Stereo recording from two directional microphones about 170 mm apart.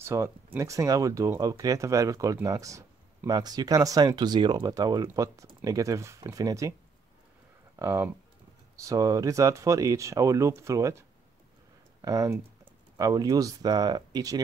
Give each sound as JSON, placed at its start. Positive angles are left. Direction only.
{"t": 0.0, "sound": "speech", "side_deg": -15}
{"t": 7.8, "sound": "speech", "side_deg": -15}